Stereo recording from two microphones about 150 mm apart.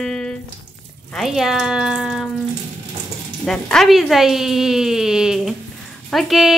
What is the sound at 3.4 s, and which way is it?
A woman's voice, 5° left (ahead or behind).